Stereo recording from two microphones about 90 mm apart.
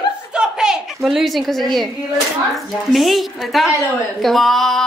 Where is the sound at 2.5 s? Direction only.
Centre (ahead or behind).